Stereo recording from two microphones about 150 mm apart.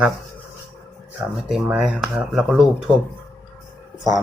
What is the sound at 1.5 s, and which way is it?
Speech, 5° right (ahead or behind).